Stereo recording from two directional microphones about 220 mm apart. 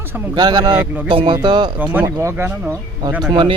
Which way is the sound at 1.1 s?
20° right (ahead or behind).